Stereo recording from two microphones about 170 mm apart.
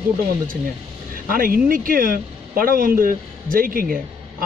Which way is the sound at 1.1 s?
55° right (ahead or behind).